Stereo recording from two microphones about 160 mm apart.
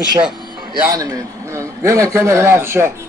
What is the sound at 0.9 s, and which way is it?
A man's voice, 20° right (ahead or behind).